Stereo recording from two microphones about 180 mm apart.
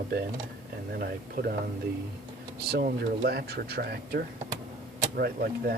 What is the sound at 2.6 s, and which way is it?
Speech, 65° right (ahead or behind).